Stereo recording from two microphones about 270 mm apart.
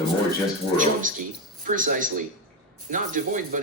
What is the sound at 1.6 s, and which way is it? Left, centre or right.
Speech, right.